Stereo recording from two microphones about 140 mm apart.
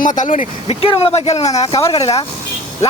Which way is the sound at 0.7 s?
45° left (ahead or behind).